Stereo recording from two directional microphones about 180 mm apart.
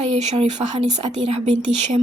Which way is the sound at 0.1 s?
35° right (ahead or behind).